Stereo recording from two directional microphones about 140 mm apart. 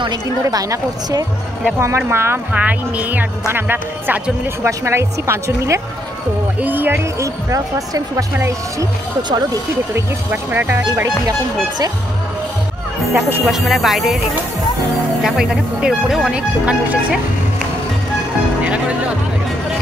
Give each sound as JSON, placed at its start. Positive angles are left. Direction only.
{"t": 0.0, "sound": "speech", "side_deg": -30}
{"t": 10.3, "sound": "speech", "side_deg": -15}
{"t": 13.1, "sound": "speech", "side_deg": -5}
{"t": 15.2, "sound": "speech", "side_deg": -5}
{"t": 18.6, "sound": "music", "side_deg": -10}